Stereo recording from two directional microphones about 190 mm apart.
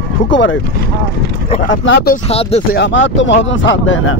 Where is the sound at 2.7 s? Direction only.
70° left (ahead or behind); by 4.2 s 90° left.